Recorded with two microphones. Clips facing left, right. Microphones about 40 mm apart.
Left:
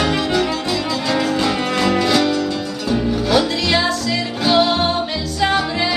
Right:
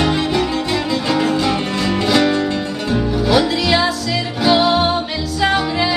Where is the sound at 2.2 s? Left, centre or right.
Right.